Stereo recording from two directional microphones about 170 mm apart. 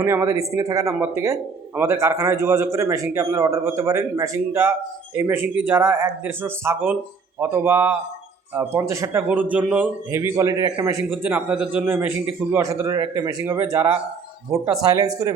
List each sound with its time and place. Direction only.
0.0 s a man's voice: 15° right (ahead or behind)
11.1 s a man's voice: 10° right (ahead or behind)